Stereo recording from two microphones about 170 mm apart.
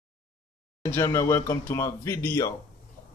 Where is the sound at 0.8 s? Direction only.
15° left (ahead or behind).